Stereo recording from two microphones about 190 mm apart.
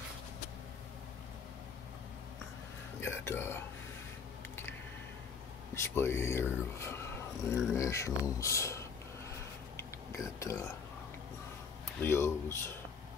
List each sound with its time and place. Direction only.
3.0 s speech: 10° left (ahead or behind)
5.8 s speech: 15° left (ahead or behind)
7.4 s speech: 15° left (ahead or behind)
9.8 s a sound: 15° left (ahead or behind)
12.0 s speech: 10° left (ahead or behind)